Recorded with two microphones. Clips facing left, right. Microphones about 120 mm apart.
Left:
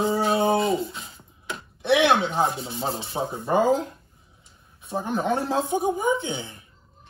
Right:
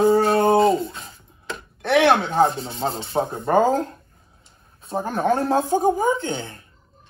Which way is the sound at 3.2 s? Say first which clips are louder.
Right 4 dB; 55° right (ahead or behind).